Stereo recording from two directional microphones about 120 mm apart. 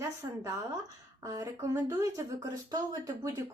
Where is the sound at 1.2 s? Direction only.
25° right (ahead or behind).